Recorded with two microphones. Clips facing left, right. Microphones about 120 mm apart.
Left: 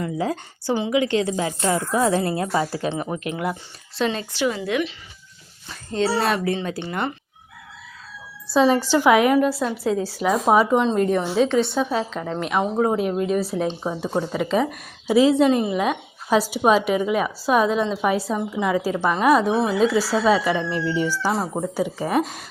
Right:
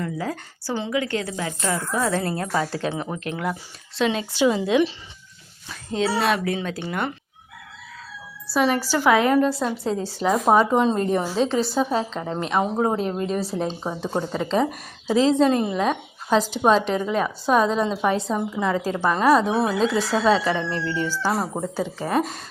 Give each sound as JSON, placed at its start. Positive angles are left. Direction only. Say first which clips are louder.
{"t": 0.0, "sound": "a woman's voice", "louder": "left 3 dB", "side_deg": 20}
{"t": 2.5, "sound": "speech", "louder": "left 1 dB", "side_deg": 5}
{"t": 4.3, "sound": "a woman's voice", "louder": "right 3 dB", "side_deg": -15}
{"t": 5.6, "sound": "speech", "louder": "left 1 dB", "side_deg": 0}
{"t": 8.5, "sound": "a woman's voice", "louder": "left 4 dB", "side_deg": 20}
{"t": 12.7, "sound": "speech", "louder": "left 2 dB", "side_deg": -10}
{"t": 13.0, "sound": "a woman's voice", "louder": "left 3 dB", "side_deg": 10}